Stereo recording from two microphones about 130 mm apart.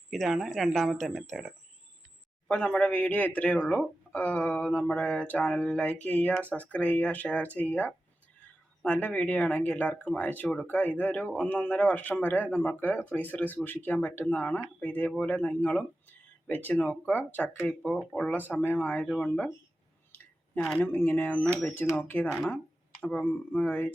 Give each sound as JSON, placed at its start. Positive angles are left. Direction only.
{"t": 0.1, "sound": "speech", "side_deg": 0}
{"t": 20.7, "sound": "speech", "side_deg": 15}